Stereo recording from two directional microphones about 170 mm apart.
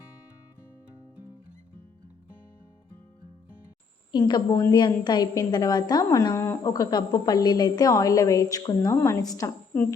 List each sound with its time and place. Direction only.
4.1 s a woman's voice: 25° left (ahead or behind)